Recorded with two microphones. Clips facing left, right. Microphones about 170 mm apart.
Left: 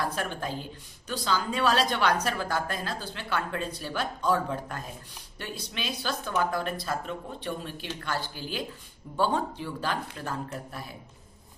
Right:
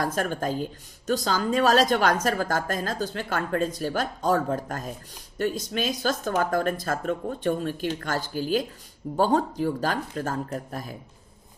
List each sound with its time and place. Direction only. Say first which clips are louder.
0.0 s speech: right 5 dB; 45° right (ahead or behind)